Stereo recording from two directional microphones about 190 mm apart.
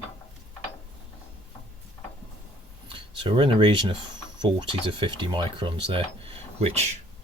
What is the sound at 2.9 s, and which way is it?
Speech, 25° right (ahead or behind).